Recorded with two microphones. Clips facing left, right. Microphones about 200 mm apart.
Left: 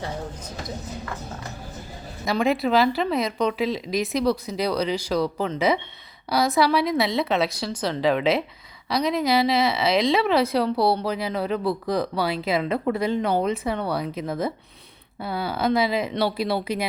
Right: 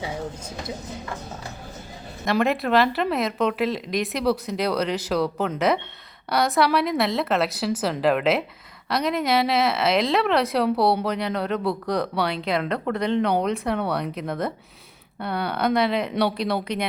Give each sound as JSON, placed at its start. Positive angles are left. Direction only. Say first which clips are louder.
{"t": 2.2, "sound": "speech", "louder": "even", "side_deg": 0}